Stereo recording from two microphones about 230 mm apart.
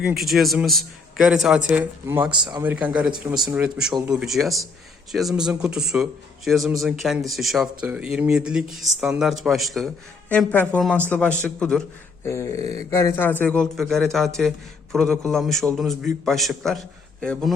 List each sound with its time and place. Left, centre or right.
0.0 s a man's voice: centre
2.3 s a man's voice: centre
2.6 s a man's voice: centre